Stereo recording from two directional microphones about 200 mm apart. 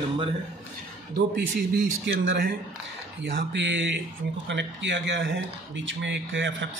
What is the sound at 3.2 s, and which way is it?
A man's voice, 55° right (ahead or behind).